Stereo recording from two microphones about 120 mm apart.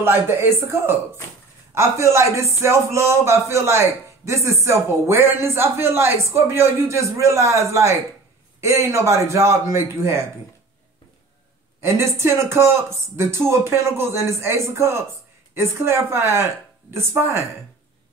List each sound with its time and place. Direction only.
0.0 s a man's voice: 20° right (ahead or behind)
11.8 s a man's voice: 20° right (ahead or behind)